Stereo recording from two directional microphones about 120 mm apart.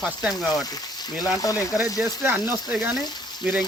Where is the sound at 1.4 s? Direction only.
30° left (ahead or behind).